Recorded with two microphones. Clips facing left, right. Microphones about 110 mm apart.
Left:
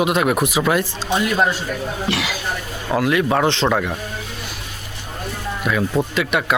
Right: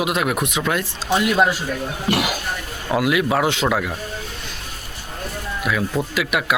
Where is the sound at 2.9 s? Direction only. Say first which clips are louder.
Left 1 dB; 10° right (ahead or behind).